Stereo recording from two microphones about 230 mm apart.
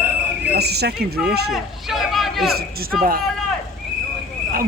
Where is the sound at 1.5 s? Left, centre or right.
Centre.